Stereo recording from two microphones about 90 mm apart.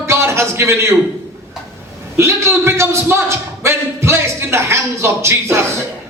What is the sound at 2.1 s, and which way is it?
A man's voice, 30° right (ahead or behind).